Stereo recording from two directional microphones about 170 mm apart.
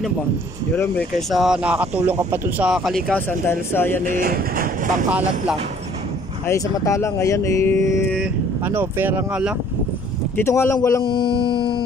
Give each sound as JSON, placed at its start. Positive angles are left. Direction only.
{"t": 1.3, "sound": "speech", "side_deg": -5}
{"t": 4.0, "sound": "speech", "side_deg": -55}
{"t": 6.4, "sound": "speech", "side_deg": 20}
{"t": 8.6, "sound": "speech", "side_deg": -10}
{"t": 10.3, "sound": "speech", "side_deg": 15}
{"t": 11.1, "sound": "speech", "side_deg": 30}